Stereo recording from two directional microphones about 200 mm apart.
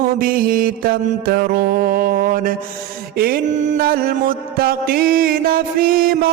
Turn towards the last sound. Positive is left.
turn(degrees=-45)  # may be behind; listen again after turning